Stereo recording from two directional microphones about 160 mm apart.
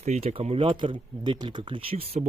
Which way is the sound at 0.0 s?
45° right (ahead or behind).